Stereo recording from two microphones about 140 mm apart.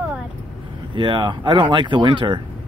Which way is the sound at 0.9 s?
35° right (ahead or behind).